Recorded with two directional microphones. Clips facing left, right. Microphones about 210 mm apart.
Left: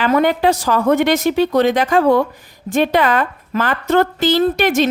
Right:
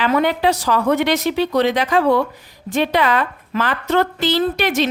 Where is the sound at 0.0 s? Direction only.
45° left (ahead or behind).